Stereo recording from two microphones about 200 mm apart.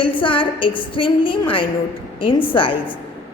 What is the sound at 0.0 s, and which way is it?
A woman's voice, 25° left (ahead or behind).